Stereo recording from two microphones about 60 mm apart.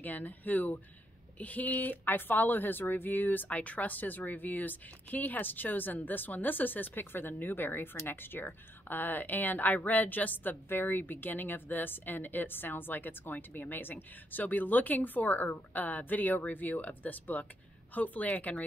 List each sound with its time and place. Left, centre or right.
0.0 s a woman's voice: left